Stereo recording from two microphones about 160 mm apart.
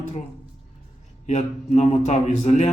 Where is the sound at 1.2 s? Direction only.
45° left (ahead or behind).